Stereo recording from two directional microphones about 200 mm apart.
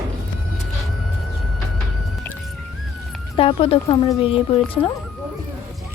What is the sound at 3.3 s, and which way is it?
Speech, 30° left (ahead or behind).